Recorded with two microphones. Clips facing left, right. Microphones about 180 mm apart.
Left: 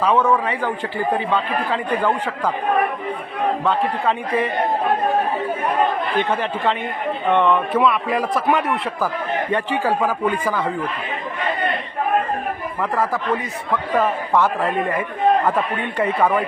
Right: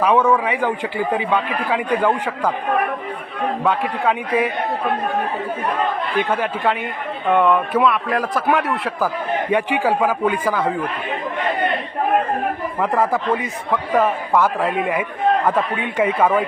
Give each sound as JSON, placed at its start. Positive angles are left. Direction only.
{"t": 0.0, "sound": "a man's voice", "side_deg": -15}
{"t": 3.7, "sound": "a man's voice", "side_deg": -10}
{"t": 6.2, "sound": "speech", "side_deg": -5}
{"t": 9.5, "sound": "a man's voice", "side_deg": -10}
{"t": 12.8, "sound": "speech", "side_deg": -20}
{"t": 13.9, "sound": "a man's voice", "side_deg": -10}